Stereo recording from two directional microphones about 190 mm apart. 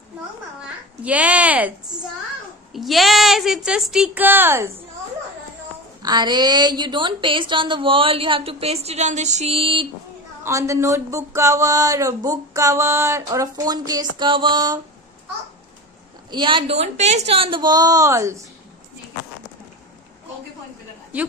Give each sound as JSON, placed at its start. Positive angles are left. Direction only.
{"t": 1.0, "sound": "speech", "side_deg": -5}
{"t": 2.7, "sound": "a woman's voice", "side_deg": 0}
{"t": 6.0, "sound": "a woman's voice", "side_deg": -20}
{"t": 10.4, "sound": "speech", "side_deg": -15}
{"t": 16.3, "sound": "a woman's voice", "side_deg": -25}